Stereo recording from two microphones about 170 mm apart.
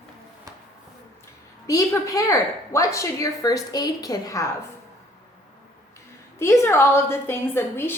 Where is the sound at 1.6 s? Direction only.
20° left (ahead or behind).